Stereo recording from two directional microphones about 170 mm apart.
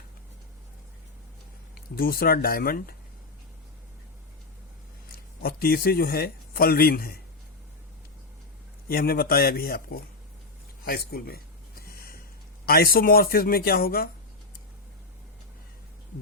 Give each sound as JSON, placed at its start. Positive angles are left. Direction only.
{"t": 2.0, "sound": "speech", "side_deg": 60}
{"t": 5.1, "sound": "speech", "side_deg": 60}
{"t": 8.9, "sound": "speech", "side_deg": 60}
{"t": 11.9, "sound": "snort", "side_deg": 65}
{"t": 12.6, "sound": "speech", "side_deg": 60}